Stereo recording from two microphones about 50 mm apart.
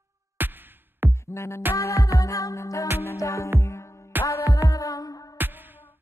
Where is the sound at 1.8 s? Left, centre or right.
Left.